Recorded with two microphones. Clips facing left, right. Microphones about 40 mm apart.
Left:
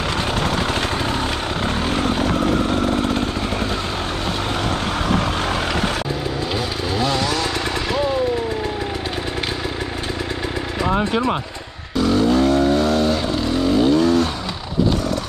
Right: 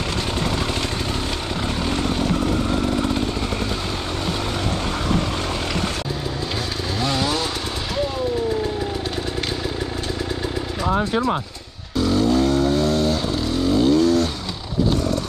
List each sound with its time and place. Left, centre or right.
1.6 s vehicle: left
7.0 s chainsaw: centre
11.0 s speech: left
12.0 s vehicle: centre